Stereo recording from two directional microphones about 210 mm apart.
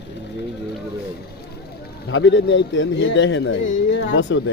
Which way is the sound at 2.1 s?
60° left (ahead or behind).